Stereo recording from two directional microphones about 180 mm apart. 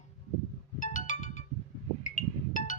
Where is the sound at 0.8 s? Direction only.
45° left (ahead or behind).